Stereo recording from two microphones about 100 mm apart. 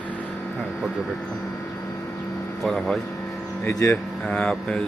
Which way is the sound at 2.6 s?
Centre (ahead or behind).